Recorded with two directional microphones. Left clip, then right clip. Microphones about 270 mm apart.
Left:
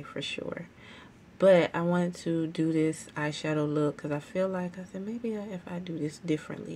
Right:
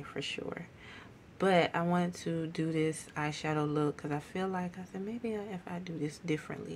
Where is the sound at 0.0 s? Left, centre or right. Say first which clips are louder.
Left 3 dB; centre.